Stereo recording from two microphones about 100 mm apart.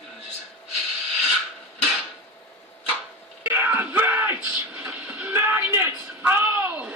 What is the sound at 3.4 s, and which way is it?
Music, 20° right (ahead or behind).